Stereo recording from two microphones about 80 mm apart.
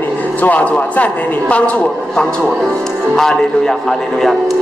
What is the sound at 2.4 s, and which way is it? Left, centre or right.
A man's voice, centre.